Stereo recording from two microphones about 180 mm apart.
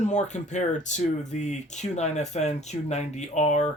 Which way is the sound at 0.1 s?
40° left (ahead or behind).